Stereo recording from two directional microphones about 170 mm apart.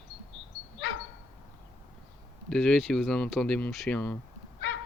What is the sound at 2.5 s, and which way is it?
Speech, 5° left (ahead or behind).